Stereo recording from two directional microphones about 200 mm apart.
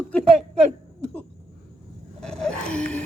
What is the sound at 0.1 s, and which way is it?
Speech, 5° left (ahead or behind).